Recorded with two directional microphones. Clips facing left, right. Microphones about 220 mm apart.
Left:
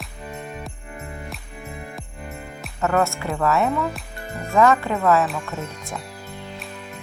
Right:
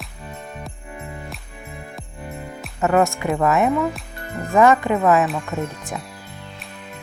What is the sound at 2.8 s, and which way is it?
Speech, 15° right (ahead or behind).